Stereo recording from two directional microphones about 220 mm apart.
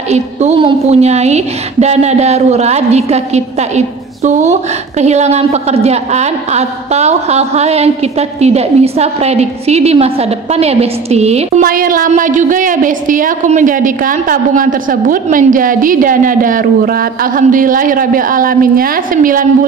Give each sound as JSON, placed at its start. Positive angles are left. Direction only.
{"t": 0.1, "sound": "a woman's voice", "side_deg": -30}
{"t": 11.6, "sound": "a woman's voice", "side_deg": -40}